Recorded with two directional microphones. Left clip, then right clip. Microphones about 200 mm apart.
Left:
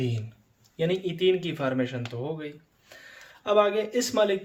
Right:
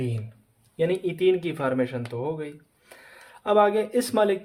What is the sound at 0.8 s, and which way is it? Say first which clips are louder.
Speech: right 2 dB; 45° right (ahead or behind).